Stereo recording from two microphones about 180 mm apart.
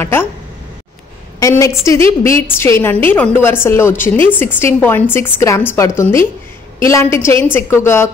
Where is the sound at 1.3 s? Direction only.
15° left (ahead or behind).